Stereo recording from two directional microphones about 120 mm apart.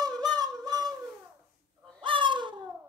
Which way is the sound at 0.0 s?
35° right (ahead or behind).